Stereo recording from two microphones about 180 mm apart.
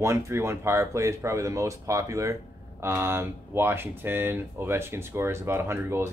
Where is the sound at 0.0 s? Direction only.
15° right (ahead or behind).